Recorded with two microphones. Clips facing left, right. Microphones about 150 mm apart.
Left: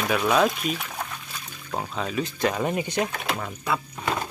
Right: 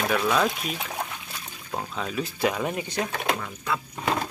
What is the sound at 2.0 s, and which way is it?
Speech, centre (ahead or behind).